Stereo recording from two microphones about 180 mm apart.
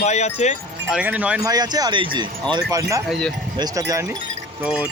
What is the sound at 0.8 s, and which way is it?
Speech, 5° right (ahead or behind).